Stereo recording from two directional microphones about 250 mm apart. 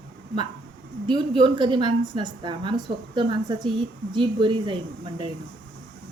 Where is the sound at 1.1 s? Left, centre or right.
Centre.